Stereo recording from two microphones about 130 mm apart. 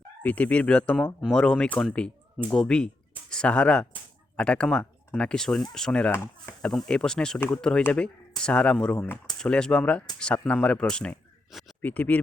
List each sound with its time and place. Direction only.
0.2 s speech: 10° left (ahead or behind)
7.3 s speech: 15° left (ahead or behind)